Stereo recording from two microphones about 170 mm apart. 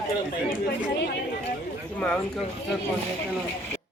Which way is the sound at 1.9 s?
5° left (ahead or behind).